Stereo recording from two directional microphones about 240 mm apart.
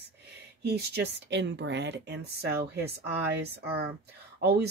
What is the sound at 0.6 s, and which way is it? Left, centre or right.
Speech, right.